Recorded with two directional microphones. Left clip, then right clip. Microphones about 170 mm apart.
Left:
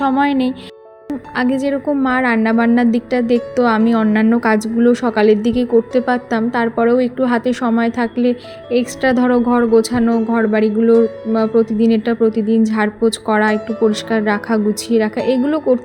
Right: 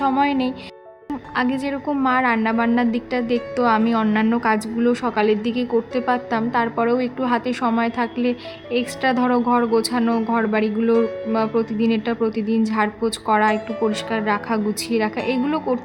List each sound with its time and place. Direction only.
0.1 s a woman's voice: 20° left (ahead or behind)